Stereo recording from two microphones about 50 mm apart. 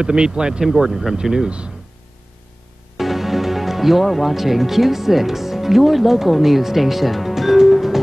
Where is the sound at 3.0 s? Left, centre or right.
Centre.